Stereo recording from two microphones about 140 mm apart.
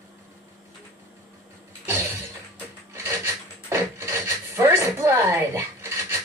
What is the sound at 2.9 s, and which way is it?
Filing, 15° right (ahead or behind).